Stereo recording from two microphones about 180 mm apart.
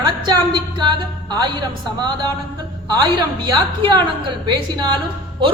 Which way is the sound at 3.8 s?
25° right (ahead or behind).